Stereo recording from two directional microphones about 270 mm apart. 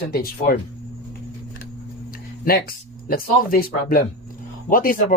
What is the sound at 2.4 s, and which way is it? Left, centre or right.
Speech, left.